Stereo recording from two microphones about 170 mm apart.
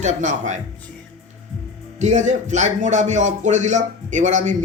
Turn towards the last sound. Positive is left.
turn(degrees=-45)  # may be behind; listen again after turning